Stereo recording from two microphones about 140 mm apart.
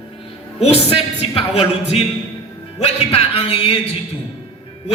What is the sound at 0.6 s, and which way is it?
Speech, 45° left (ahead or behind).